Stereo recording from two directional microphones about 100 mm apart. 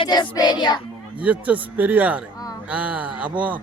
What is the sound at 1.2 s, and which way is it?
A man's voice, 15° right (ahead or behind).